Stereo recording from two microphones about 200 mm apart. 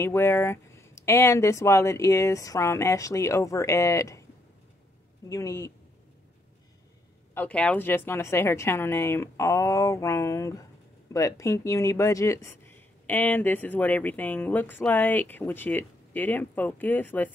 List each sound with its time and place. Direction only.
0.0 s speech: 15° left (ahead or behind)
5.3 s speech: 15° left (ahead or behind)
7.3 s speech: 5° left (ahead or behind)